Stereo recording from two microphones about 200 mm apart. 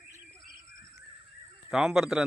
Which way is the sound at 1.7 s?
5° right (ahead or behind).